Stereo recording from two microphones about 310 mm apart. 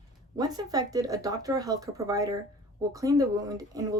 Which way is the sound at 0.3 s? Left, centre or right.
Centre.